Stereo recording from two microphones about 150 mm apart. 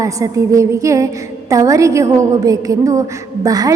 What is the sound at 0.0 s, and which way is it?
A woman's voice, 20° right (ahead or behind).